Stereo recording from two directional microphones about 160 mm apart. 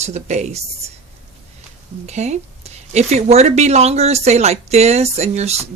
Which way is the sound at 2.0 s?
45° right (ahead or behind).